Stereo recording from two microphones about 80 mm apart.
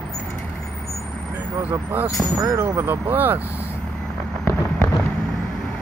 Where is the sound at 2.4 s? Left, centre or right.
Right.